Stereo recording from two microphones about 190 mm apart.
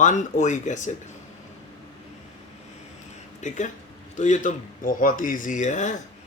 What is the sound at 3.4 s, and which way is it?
Speech, 40° left (ahead or behind).